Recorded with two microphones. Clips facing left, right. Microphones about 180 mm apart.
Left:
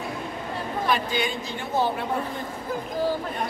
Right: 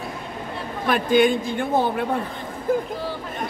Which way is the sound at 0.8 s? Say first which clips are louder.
Right 9 dB; 55° right (ahead or behind).